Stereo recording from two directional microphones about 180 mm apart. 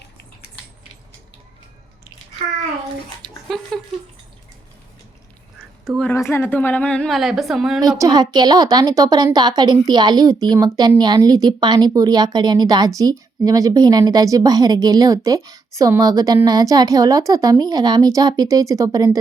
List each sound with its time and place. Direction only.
3.5 s speech: centre (ahead or behind)
6.1 s a woman's voice: 15° left (ahead or behind); by 7.8 s centre (ahead or behind)
7.8 s a woman's voice: 20° right (ahead or behind)